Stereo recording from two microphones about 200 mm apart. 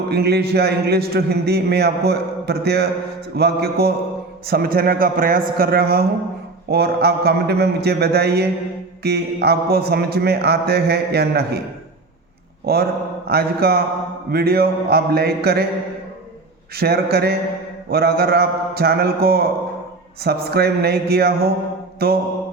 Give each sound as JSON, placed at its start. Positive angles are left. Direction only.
{"t": 0.1, "sound": "a man's voice", "side_deg": -55}
{"t": 12.6, "sound": "a man's voice", "side_deg": -50}
{"t": 16.7, "sound": "a man's voice", "side_deg": -50}
{"t": 21.9, "sound": "mantra", "side_deg": -50}